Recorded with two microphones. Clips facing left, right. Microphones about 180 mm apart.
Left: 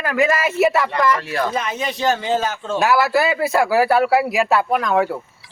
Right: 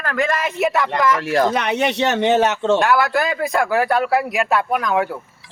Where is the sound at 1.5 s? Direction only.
75° right (ahead or behind).